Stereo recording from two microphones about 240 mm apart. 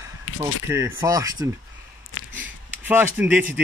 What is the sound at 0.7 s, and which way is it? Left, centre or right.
Speech, centre.